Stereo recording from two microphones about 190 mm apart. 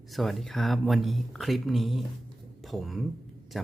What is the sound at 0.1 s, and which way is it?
Speech, centre (ahead or behind).